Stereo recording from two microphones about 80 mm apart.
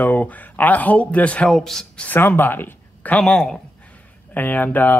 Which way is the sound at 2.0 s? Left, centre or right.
Left.